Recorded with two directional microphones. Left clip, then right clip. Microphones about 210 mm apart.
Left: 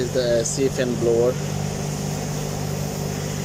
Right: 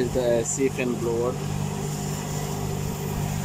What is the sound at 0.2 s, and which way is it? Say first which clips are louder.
Speech: left 3 dB; 15° right (ahead or behind).